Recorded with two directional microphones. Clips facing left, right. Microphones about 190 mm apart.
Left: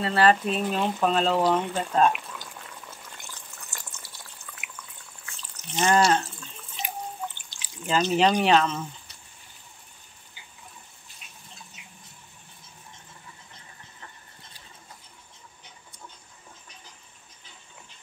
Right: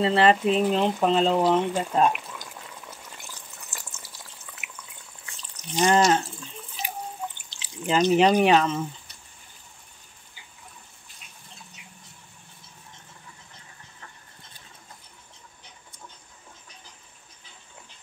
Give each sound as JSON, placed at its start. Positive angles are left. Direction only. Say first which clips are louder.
{"t": 0.0, "sound": "speech", "louder": "right 2 dB", "side_deg": -25}
{"t": 1.5, "sound": "boiling", "louder": "right 2 dB", "side_deg": -15}
{"t": 5.2, "sound": "drip", "louder": "right 1 dB", "side_deg": -15}
{"t": 7.4, "sound": "speech", "louder": "right 4 dB", "side_deg": -25}